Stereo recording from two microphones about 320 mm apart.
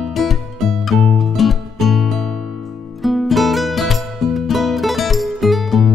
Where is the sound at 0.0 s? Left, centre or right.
Centre.